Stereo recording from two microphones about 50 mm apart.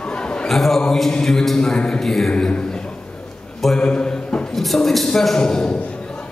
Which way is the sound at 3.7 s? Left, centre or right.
Centre.